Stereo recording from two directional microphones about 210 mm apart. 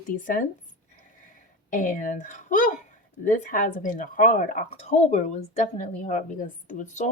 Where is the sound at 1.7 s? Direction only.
40° left (ahead or behind).